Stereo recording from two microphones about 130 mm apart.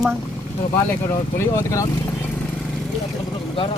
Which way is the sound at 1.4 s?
25° left (ahead or behind).